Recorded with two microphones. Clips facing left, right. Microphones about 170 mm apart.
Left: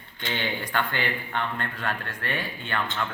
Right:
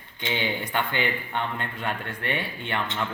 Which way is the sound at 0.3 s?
10° right (ahead or behind).